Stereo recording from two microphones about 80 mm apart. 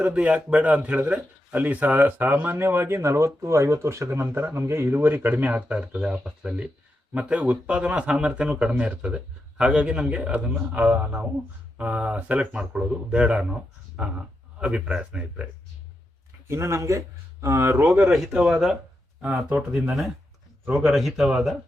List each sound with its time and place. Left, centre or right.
0.0 s speech: centre
16.5 s speech: right
17.8 s speech: centre
18.1 s speech: centre
20.7 s speech: centre